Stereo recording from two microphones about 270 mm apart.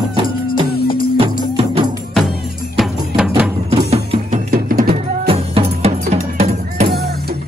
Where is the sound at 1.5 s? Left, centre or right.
Centre.